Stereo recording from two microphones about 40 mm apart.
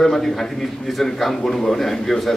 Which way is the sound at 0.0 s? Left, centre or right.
Centre.